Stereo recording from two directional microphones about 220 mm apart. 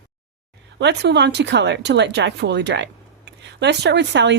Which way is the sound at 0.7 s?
50° right (ahead or behind).